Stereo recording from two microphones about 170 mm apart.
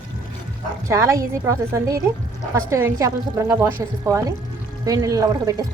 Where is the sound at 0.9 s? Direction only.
15° right (ahead or behind).